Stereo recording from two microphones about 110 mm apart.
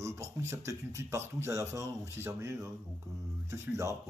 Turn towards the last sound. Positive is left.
turn(degrees=-25)  # may be behind; listen again after turning